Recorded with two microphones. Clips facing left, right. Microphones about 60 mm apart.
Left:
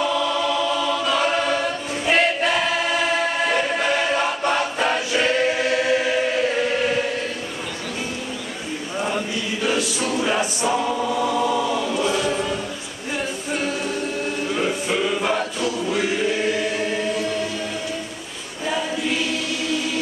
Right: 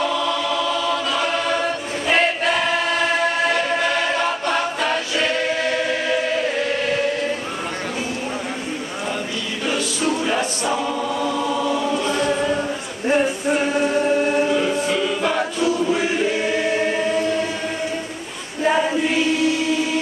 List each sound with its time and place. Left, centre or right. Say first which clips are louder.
0.0 s choir: even; centre
10.2 s choir: even; centre
12.3 s choir: right 3 dB; right
13.7 s choir: right 8 dB; right
14.5 s music: right 3 dB; centre
16.6 s choir: right 3 dB; right
18.6 s choir: right 7 dB; right